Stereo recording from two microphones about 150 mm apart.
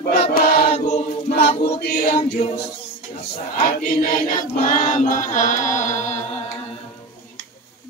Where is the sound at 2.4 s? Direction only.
40° left (ahead or behind).